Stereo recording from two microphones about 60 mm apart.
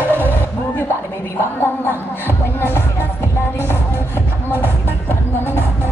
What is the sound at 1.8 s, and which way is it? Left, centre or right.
Music, left.